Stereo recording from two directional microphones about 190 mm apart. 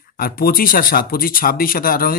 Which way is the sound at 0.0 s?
50° left (ahead or behind).